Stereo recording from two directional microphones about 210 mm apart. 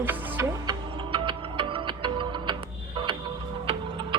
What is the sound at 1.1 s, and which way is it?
Music, 25° right (ahead or behind).